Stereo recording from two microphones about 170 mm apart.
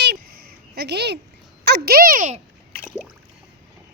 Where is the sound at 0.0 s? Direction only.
75° right (ahead or behind).